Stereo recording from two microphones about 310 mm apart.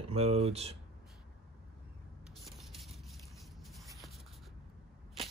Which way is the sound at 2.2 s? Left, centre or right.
Centre.